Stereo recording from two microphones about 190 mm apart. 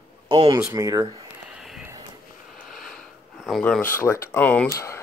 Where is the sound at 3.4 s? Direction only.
Centre (ahead or behind).